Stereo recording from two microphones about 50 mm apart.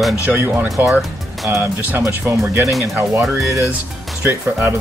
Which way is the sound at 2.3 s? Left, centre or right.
Right.